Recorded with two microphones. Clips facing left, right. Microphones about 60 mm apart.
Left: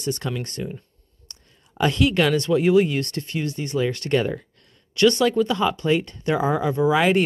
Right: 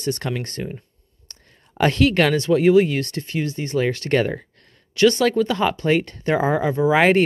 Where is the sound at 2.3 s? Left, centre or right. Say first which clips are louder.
Right 3 dB; right.